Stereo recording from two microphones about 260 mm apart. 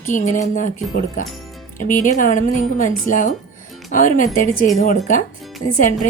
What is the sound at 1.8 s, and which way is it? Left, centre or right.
A woman's voice, left.